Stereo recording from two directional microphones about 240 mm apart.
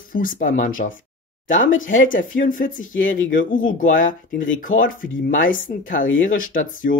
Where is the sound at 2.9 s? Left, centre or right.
Left.